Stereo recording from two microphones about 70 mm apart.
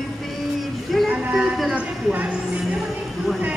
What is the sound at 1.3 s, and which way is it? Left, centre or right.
A woman's voice, centre.